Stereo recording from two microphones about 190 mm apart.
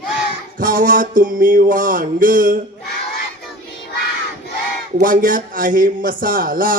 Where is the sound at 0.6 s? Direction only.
45° right (ahead or behind).